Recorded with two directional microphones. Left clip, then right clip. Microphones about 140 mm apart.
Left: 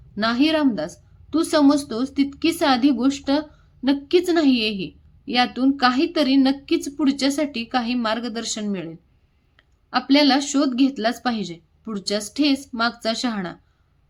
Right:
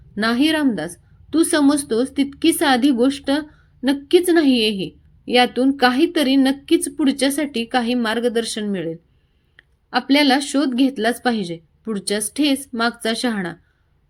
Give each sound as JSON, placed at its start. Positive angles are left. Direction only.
{"t": 0.2, "sound": "a woman's voice", "side_deg": -20}